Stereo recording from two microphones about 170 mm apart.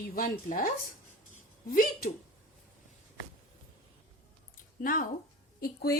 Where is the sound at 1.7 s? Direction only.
60° left (ahead or behind).